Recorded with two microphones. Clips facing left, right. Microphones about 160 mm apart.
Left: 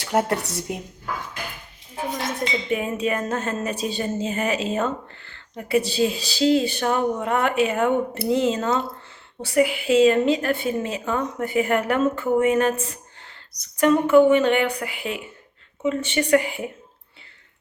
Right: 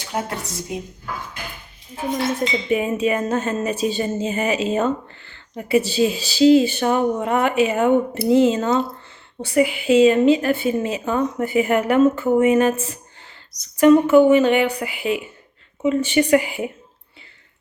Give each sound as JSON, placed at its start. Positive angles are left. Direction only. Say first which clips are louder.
{"t": 0.0, "sound": "a woman's voice", "louder": "left 5 dB", "side_deg": 65}
{"t": 2.1, "sound": "a woman's voice", "louder": "right 6 dB", "side_deg": -5}